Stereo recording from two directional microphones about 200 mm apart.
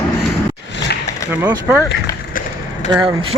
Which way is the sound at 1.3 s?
10° right (ahead or behind).